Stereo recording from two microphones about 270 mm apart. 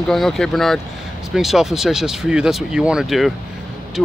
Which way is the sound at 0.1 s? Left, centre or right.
Centre.